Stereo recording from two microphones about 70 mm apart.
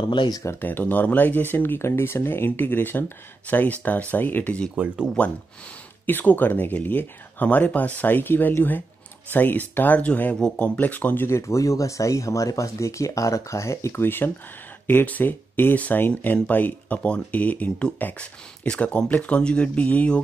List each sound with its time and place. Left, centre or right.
0.1 s speech: left
0.6 s speech: left
4.8 s speech: right
5.2 s speech: centre
11.2 s speech: left